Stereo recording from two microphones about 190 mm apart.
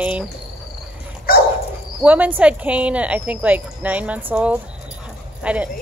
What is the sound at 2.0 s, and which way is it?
A woman's voice, 10° right (ahead or behind).